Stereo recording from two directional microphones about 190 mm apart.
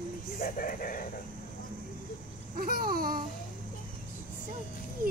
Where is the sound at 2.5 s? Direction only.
50° right (ahead or behind).